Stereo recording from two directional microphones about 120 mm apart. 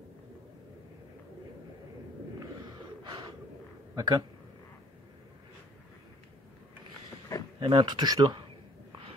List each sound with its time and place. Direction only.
2.6 s gasp: 40° right (ahead or behind)
3.9 s a man's voice: 30° right (ahead or behind)
7.3 s a sound: 25° left (ahead or behind)
7.6 s speech: 40° right (ahead or behind)